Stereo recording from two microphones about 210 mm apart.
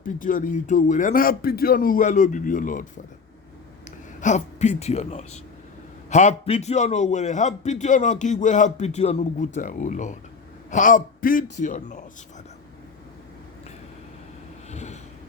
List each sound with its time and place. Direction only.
0.0 s a man's voice: 40° left (ahead or behind)
3.8 s a man's voice: 35° left (ahead or behind)
14.7 s a sound: 35° left (ahead or behind)